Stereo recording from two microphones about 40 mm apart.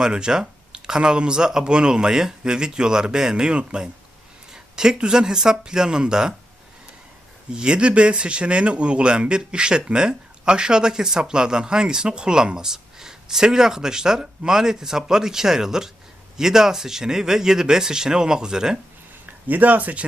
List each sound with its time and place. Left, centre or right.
0.0 s speech: centre
7.5 s speech: right
19.2 s speech: right